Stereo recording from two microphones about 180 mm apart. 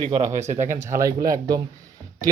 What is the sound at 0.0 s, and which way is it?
Speech, 40° right (ahead or behind).